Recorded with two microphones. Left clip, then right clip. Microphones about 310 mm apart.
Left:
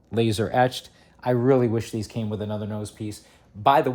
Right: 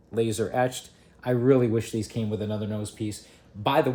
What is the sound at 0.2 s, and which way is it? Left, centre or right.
Speech, centre.